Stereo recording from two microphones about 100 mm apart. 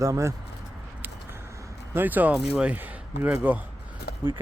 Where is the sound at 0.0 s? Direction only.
30° right (ahead or behind).